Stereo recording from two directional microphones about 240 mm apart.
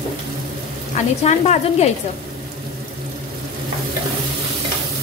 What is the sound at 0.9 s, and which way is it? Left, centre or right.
Speech, left.